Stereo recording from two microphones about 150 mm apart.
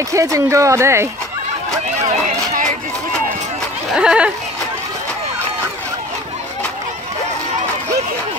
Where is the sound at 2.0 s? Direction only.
50° right (ahead or behind).